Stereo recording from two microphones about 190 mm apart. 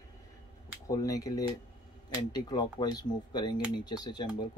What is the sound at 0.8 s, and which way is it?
Speech, 20° left (ahead or behind).